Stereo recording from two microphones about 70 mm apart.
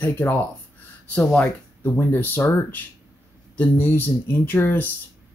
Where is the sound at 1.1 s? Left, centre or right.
Left.